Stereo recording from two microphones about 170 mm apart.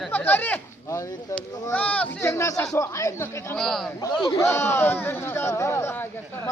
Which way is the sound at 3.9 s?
25° left (ahead or behind).